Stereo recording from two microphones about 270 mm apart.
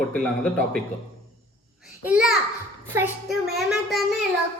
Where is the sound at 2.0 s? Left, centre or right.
Centre.